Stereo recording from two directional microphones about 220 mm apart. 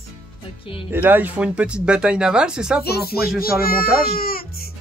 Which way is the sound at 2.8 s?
45° left (ahead or behind).